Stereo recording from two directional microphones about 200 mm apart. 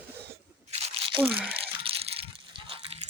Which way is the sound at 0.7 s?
30° right (ahead or behind).